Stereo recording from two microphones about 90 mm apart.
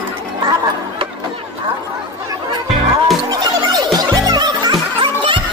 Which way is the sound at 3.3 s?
45° right (ahead or behind).